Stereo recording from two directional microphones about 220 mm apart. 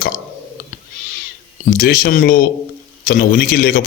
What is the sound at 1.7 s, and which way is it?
A man's voice, 40° left (ahead or behind).